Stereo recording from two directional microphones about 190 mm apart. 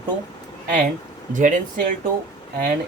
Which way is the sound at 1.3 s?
40° right (ahead or behind).